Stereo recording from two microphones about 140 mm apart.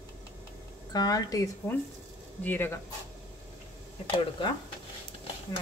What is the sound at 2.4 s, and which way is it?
Speech, 15° left (ahead or behind).